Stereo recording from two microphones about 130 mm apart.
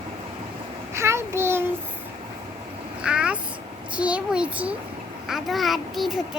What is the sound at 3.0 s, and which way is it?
A child's voice, 10° right (ahead or behind).